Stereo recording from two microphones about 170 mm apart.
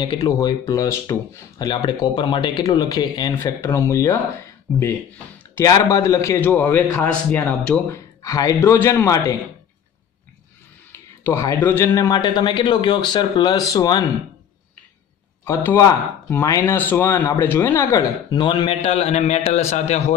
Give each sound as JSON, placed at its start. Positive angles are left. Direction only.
{"t": 0.0, "sound": "speech", "side_deg": 25}
{"t": 5.4, "sound": "speech", "side_deg": 15}
{"t": 8.2, "sound": "speech", "side_deg": 20}
{"t": 10.9, "sound": "speech", "side_deg": 15}
{"t": 15.4, "sound": "a man's voice", "side_deg": 15}